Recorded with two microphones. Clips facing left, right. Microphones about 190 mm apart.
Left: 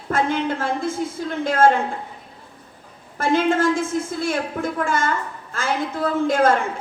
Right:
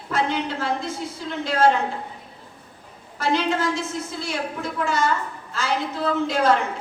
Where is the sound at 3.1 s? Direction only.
50° left (ahead or behind).